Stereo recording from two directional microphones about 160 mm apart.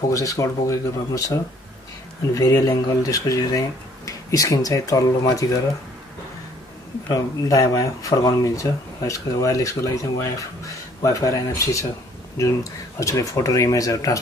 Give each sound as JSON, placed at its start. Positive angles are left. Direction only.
{"t": 0.1, "sound": "speech", "side_deg": 20}
{"t": 7.1, "sound": "speech", "side_deg": 20}
{"t": 13.0, "sound": "speech", "side_deg": 20}